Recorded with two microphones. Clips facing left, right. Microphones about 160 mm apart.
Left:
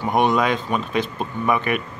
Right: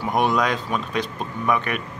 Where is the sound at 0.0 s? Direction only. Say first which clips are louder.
Left 2 dB; centre (ahead or behind).